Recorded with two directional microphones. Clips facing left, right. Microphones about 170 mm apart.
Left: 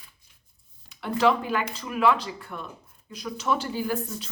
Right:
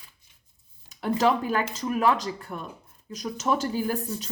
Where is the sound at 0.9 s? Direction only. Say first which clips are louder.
Even; 40° right (ahead or behind).